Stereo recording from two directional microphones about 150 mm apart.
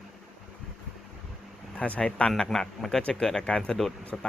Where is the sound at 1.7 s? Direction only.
5° left (ahead or behind).